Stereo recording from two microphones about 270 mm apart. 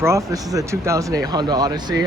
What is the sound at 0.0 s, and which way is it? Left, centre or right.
Speech, centre.